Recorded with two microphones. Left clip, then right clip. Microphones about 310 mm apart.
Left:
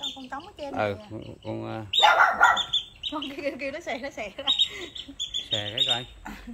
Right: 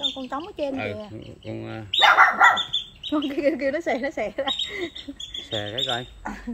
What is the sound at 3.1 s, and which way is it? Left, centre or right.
Speech, right.